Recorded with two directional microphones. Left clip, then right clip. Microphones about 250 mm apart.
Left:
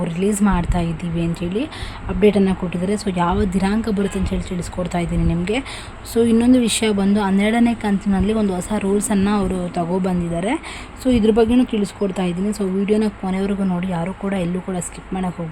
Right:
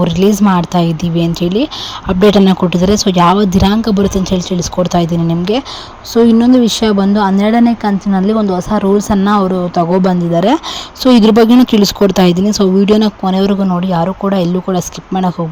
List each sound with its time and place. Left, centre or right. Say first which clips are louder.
0.0 s speech: right 9 dB; right